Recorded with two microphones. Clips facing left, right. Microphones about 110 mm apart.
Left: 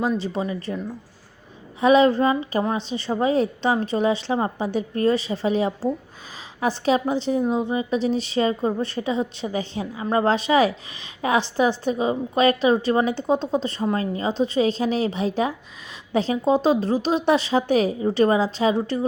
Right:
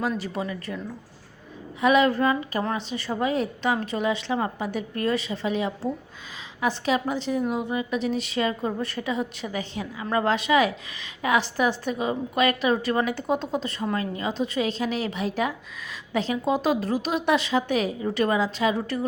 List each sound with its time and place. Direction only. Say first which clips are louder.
0.2 s a woman's voice: left 4 dB; 30° left (ahead or behind)
1.8 s a woman's voice: left 4 dB; 30° left (ahead or behind)